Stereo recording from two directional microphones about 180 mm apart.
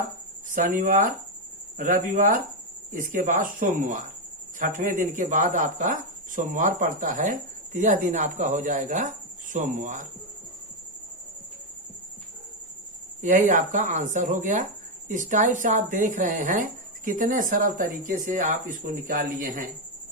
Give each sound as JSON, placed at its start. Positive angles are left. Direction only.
{"t": 0.5, "sound": "speech", "side_deg": -45}
{"t": 13.2, "sound": "speech", "side_deg": -45}